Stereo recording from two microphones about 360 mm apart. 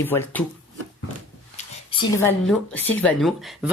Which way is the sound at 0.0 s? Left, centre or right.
Centre.